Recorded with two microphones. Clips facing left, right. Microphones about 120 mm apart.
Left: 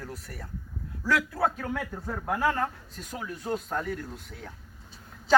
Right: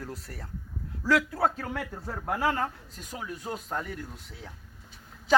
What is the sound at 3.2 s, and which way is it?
Speech, 5° right (ahead or behind).